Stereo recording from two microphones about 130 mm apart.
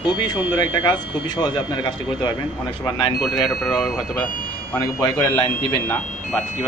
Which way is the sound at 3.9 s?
Centre (ahead or behind).